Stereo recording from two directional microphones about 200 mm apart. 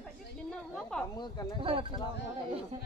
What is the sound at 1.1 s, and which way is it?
Speech, 20° left (ahead or behind).